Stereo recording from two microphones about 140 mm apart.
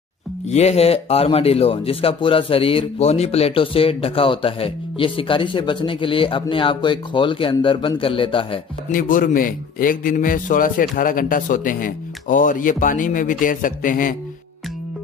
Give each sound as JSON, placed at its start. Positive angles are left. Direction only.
{"t": 0.5, "sound": "speech", "side_deg": 50}
{"t": 8.9, "sound": "a man's voice", "side_deg": 80}